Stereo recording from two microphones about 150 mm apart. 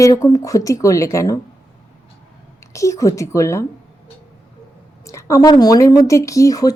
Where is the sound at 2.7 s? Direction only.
20° left (ahead or behind).